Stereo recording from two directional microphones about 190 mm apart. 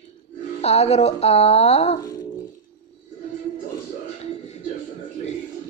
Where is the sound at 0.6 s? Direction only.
35° left (ahead or behind).